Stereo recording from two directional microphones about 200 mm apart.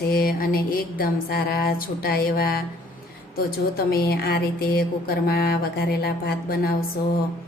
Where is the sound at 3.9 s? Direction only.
50° left (ahead or behind).